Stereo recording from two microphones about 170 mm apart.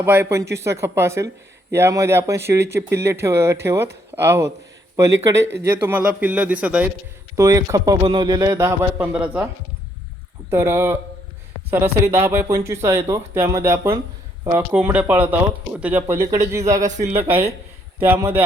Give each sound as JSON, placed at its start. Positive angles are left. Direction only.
{"t": 0.0, "sound": "a man's voice", "side_deg": -10}
{"t": 7.3, "sound": "a man's voice", "side_deg": -20}
{"t": 10.5, "sound": "a man's voice", "side_deg": -15}
{"t": 17.2, "sound": "speech", "side_deg": -35}
{"t": 18.0, "sound": "a man's voice", "side_deg": -15}